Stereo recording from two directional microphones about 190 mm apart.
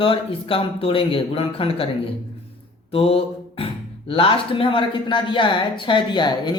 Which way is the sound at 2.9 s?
30° left (ahead or behind).